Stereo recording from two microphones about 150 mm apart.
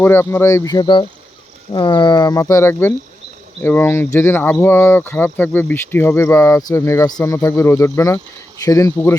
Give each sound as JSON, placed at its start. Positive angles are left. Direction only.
{"t": 0.0, "sound": "speech", "side_deg": 15}